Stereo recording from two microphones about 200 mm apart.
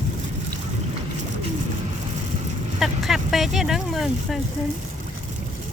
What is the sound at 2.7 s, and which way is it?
Speech, centre (ahead or behind).